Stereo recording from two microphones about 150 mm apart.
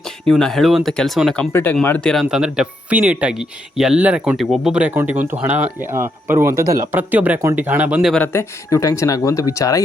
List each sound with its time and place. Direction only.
0.3 s speech: 5° left (ahead or behind)
1.5 s speech: 15° left (ahead or behind)
2.2 s speech: 5° right (ahead or behind)
8.1 s speech: 15° left (ahead or behind)